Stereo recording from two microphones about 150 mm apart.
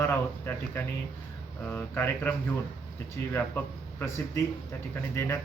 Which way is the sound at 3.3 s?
10° left (ahead or behind).